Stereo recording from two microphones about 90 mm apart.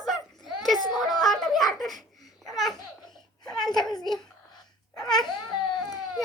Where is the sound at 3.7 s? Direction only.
55° left (ahead or behind).